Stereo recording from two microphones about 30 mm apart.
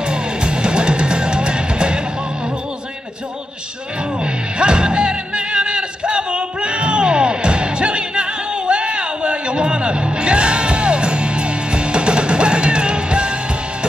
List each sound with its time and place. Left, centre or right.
0.0 s music: right
4.2 s music: right